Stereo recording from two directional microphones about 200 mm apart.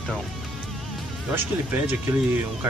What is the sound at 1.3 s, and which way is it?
Speech, 10° right (ahead or behind).